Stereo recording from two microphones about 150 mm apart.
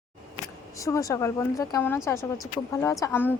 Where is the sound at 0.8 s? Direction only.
20° left (ahead or behind).